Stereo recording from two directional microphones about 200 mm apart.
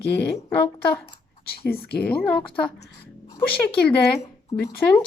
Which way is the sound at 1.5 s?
50° left (ahead or behind).